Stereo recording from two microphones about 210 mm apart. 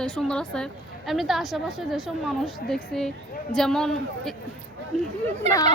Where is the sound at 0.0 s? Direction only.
5° left (ahead or behind).